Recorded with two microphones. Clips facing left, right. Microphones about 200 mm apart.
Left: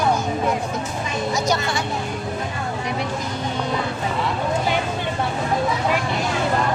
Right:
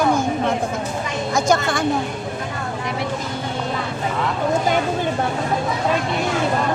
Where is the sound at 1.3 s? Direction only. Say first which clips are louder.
Right 6 dB; 50° right (ahead or behind).